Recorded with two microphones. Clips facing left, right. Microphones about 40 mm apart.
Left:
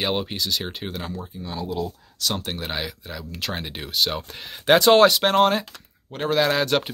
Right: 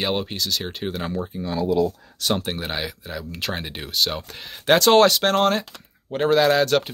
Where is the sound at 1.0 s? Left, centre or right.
Right.